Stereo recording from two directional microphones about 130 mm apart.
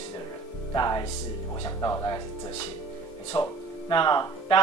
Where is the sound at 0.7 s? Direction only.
30° left (ahead or behind).